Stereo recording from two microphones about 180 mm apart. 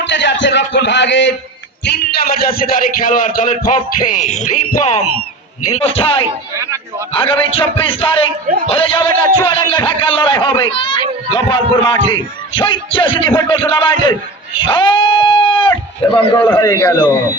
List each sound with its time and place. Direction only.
0.0 s speech: 80° left
1.8 s a man's voice: 60° left (ahead or behind)
2.6 s music: 50° left (ahead or behind)
4.8 s a man's voice: 40° left (ahead or behind)
16.5 s a man's voice: 15° left (ahead or behind)